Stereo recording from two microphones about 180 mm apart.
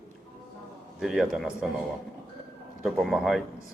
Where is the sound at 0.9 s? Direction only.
Centre (ahead or behind).